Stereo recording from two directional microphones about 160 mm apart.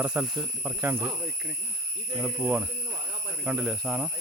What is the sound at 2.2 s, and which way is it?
Speech, 10° right (ahead or behind).